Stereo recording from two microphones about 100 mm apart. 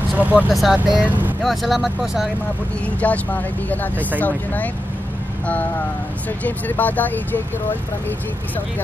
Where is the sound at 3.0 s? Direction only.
15° left (ahead or behind).